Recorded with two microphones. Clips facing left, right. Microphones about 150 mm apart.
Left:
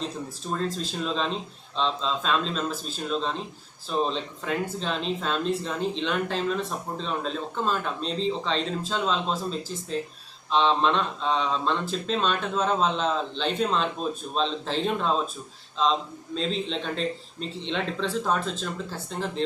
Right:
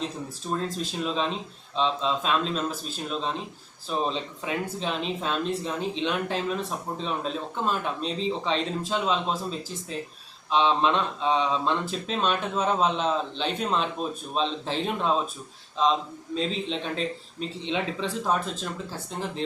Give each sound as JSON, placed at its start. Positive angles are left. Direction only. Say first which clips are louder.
{"t": 0.5, "sound": "speech", "louder": "even", "side_deg": -5}
{"t": 3.8, "sound": "speech", "louder": "left 1 dB", "side_deg": -5}
{"t": 16.3, "sound": "speech", "louder": "even", "side_deg": -5}